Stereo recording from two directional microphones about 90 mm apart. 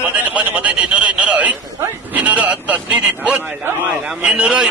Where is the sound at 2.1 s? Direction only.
15° right (ahead or behind).